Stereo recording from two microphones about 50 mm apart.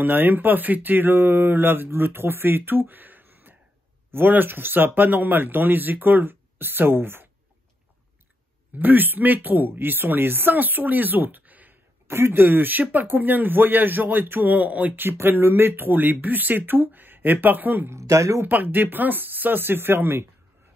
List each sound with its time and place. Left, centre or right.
0.0 s speech: right
8.7 s speech: right
12.1 s speech: right
15.0 s speech: right
17.8 s speech: right
18.4 s speech: right